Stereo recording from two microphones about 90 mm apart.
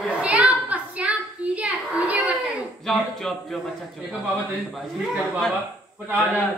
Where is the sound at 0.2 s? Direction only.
15° right (ahead or behind).